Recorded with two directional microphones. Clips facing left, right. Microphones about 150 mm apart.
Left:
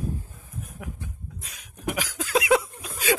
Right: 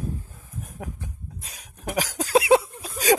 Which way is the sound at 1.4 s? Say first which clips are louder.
Left 3 dB; 35° right (ahead or behind).